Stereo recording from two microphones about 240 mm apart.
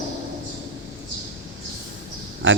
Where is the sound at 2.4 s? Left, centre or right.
Right.